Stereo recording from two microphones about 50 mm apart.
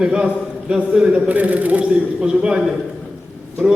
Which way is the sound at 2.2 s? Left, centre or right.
Centre.